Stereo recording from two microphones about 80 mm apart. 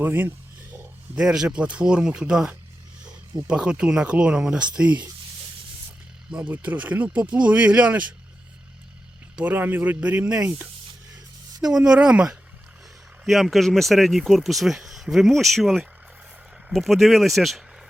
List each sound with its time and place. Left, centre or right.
0.0 s speech: right
1.1 s speech: centre
6.3 s speech: centre
9.3 s speech: centre
11.6 s speech: centre
13.2 s speech: centre